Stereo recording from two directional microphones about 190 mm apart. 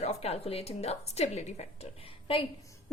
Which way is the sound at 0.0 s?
35° left (ahead or behind).